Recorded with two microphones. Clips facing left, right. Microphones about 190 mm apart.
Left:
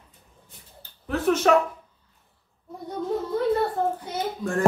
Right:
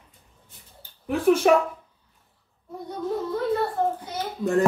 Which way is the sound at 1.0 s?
10° right (ahead or behind).